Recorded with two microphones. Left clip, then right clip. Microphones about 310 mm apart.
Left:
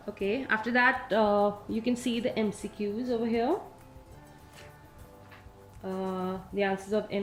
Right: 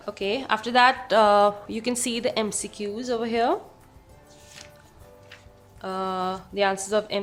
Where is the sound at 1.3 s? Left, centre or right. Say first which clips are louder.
Right 8 dB; right.